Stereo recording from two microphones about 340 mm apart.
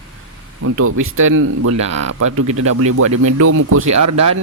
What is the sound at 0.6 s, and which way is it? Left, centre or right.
Speech, right.